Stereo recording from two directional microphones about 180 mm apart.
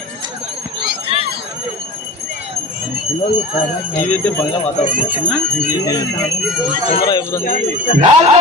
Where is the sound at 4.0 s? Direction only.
10° left (ahead or behind).